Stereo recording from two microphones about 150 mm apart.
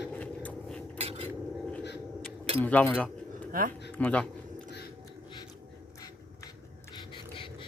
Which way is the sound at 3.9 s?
10° left (ahead or behind).